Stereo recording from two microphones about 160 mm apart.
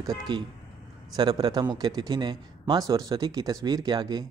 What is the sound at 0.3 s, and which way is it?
Speech, 25° right (ahead or behind).